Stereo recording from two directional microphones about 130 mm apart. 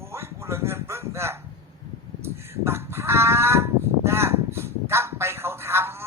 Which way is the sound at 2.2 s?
20° right (ahead or behind).